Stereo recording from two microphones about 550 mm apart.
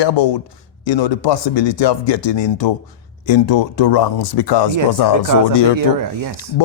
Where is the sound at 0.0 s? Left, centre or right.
Left.